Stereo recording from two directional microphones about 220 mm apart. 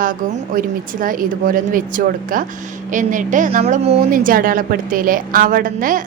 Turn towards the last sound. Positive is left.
turn(degrees=-40)  # may be behind; listen again after turning